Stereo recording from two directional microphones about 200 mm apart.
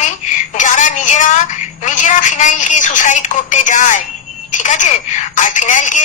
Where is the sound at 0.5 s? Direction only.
40° left (ahead or behind).